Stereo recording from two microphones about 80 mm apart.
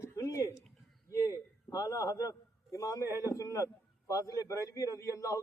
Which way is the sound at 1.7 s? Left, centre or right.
Left.